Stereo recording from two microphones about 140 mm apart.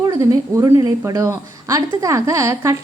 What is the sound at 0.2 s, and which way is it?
A woman's voice, 25° right (ahead or behind).